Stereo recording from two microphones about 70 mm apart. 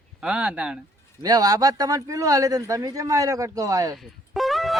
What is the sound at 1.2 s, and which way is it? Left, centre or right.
Speech, right.